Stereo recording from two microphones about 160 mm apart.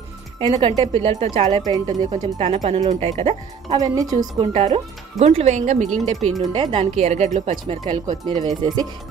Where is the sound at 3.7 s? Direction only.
20° right (ahead or behind).